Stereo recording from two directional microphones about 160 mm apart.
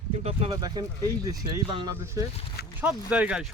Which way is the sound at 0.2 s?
40° right (ahead or behind).